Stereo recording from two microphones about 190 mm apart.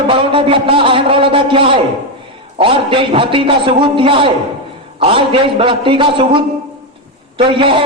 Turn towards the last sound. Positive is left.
turn(degrees=-25)  # may be behind; listen again after turning